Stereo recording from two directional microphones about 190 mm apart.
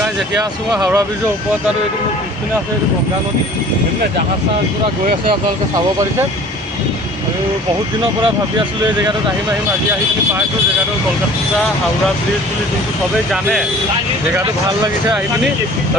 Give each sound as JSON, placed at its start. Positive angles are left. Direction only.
{"t": 0.7, "sound": "speech", "side_deg": -20}
{"t": 13.3, "sound": "speech", "side_deg": 0}